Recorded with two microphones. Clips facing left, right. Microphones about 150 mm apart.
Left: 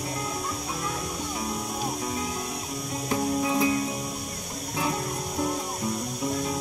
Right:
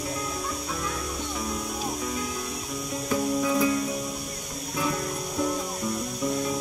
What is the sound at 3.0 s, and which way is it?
Music, 30° left (ahead or behind).